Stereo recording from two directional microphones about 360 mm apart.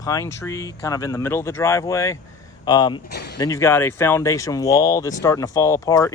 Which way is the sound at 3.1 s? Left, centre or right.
Left.